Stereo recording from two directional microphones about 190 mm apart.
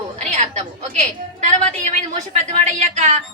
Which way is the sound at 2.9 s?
40° right (ahead or behind).